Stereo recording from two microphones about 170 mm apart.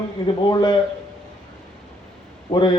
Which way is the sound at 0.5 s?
25° left (ahead or behind).